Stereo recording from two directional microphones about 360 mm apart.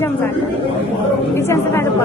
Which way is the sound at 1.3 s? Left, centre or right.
Centre.